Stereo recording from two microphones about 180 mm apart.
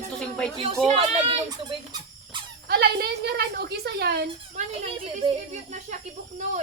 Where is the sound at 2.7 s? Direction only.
60° right (ahead or behind).